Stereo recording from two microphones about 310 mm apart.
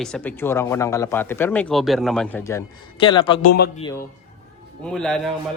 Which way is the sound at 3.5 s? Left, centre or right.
Left.